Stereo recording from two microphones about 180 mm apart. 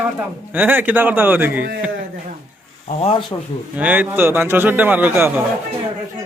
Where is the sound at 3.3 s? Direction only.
20° left (ahead or behind).